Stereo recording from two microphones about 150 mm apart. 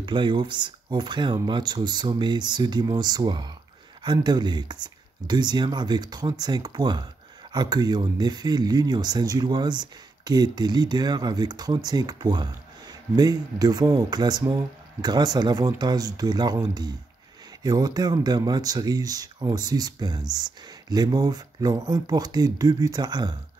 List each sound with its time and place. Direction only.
0.0 s speech: 30° right (ahead or behind)
17.6 s speech: 25° right (ahead or behind)